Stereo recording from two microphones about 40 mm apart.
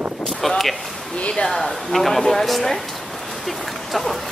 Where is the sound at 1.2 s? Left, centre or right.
Left.